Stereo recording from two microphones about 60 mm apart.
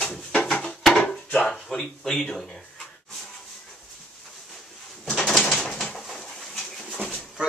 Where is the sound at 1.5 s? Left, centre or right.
Centre.